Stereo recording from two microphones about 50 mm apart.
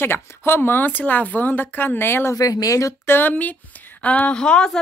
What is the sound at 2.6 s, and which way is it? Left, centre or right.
Speech, left.